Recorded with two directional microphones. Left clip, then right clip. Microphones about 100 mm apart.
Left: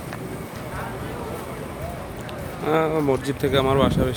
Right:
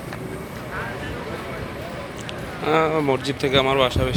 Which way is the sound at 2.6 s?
45° left (ahead or behind).